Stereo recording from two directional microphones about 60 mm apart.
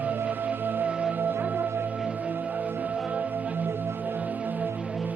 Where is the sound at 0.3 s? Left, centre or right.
Right.